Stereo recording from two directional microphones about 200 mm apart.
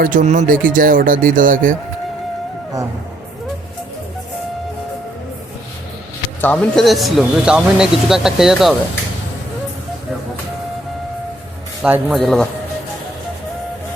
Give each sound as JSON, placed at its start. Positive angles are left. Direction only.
{"t": 0.0, "sound": "speech", "side_deg": -40}
{"t": 6.4, "sound": "speech", "side_deg": 5}
{"t": 11.8, "sound": "speech", "side_deg": -5}